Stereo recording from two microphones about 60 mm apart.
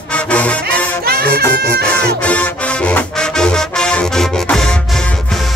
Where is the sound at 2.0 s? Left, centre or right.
Left.